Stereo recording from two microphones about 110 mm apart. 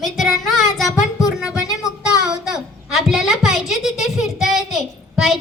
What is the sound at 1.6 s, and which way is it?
Child singing, 30° left (ahead or behind).